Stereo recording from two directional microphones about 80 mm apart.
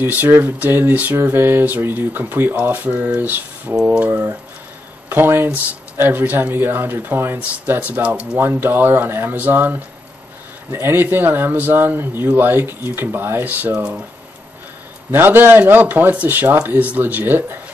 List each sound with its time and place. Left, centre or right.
0.0 s speech: right
4.1 s speech: right; by 8.4 s centre
8.4 s speech: right
15.0 s speech: right